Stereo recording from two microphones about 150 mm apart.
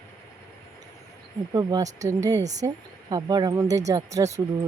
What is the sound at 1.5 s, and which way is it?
Speech, 25° right (ahead or behind).